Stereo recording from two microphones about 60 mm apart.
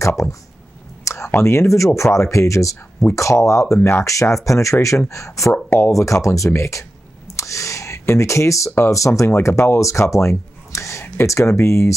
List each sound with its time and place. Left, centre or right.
0.0 s speech: left
9.3 s speech: left